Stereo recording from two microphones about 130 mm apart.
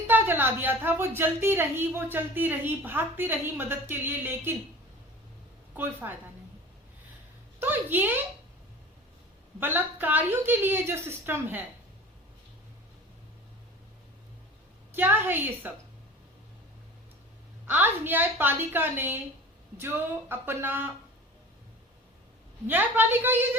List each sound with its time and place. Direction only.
0.1 s speech: 15° right (ahead or behind)
5.7 s speech: 15° right (ahead or behind)
7.6 s speech: 15° right (ahead or behind)
9.6 s speech: 15° right (ahead or behind)
14.9 s speech: 15° right (ahead or behind)
17.7 s speech: 15° right (ahead or behind)
22.6 s speech: 15° right (ahead or behind)